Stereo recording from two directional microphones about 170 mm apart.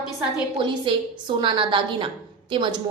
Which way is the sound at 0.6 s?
30° right (ahead or behind).